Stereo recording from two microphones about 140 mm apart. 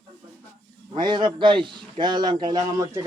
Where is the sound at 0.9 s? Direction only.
35° right (ahead or behind).